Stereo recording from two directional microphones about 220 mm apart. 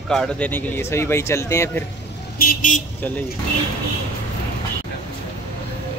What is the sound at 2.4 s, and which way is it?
Vehicle, 35° left (ahead or behind).